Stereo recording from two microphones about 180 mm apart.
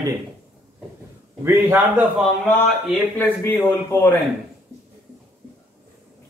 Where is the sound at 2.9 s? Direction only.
10° left (ahead or behind).